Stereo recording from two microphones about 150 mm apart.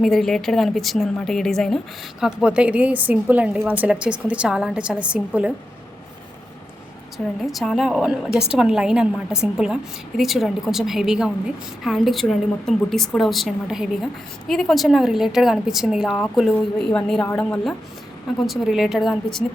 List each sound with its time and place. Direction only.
0.0 s a woman's voice: centre (ahead or behind)
7.4 s a woman's voice: centre (ahead or behind)